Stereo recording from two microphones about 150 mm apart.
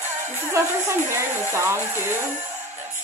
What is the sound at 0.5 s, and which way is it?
Speech, 15° right (ahead or behind).